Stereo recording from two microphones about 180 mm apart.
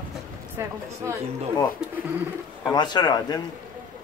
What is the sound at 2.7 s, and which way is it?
Speech, 25° left (ahead or behind).